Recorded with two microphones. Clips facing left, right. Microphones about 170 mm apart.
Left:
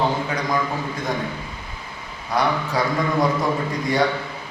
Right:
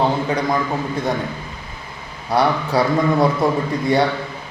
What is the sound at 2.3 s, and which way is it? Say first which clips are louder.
Speech: right 4 dB; 30° right (ahead or behind).